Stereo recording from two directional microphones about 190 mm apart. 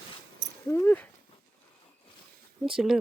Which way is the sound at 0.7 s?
10° left (ahead or behind).